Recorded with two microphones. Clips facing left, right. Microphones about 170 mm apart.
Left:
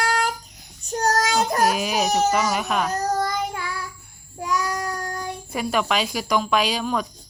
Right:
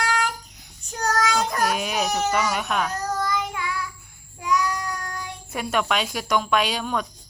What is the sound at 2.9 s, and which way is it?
Child singing, 40° left (ahead or behind).